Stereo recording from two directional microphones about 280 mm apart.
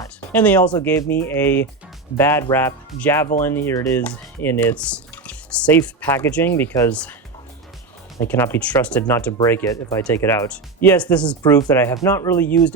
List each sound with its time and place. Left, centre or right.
0.0 s speech: centre
8.2 s speech: centre